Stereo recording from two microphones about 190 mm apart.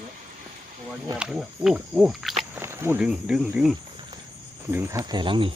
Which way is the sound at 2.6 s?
15° right (ahead or behind).